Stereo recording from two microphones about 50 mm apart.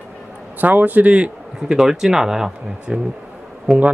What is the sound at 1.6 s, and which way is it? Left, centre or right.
Speech, centre.